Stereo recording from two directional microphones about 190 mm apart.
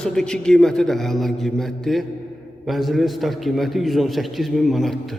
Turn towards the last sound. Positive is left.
turn(degrees=0)  # may be behind; listen again after turning